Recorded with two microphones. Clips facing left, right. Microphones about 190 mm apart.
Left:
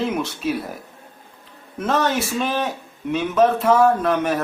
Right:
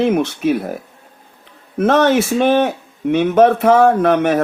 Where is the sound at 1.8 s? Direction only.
65° right (ahead or behind).